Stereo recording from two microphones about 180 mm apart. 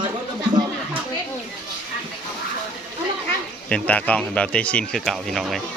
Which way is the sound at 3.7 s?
5° left (ahead or behind).